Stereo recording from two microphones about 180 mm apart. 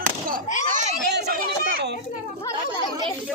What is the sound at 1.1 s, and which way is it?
Chatter, 65° right (ahead or behind).